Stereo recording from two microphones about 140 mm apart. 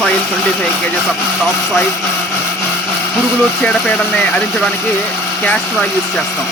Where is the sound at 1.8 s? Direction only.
20° left (ahead or behind).